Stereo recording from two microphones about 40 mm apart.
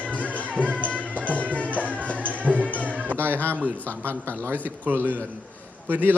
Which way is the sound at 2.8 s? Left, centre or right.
Right.